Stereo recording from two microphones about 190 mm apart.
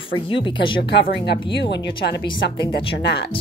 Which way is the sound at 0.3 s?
25° left (ahead or behind).